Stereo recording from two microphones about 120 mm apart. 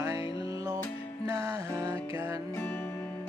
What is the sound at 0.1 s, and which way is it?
Music, 50° left (ahead or behind).